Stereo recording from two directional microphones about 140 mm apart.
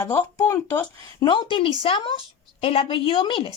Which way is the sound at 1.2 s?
35° left (ahead or behind).